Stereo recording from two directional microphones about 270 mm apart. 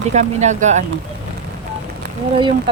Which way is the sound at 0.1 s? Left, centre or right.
Right.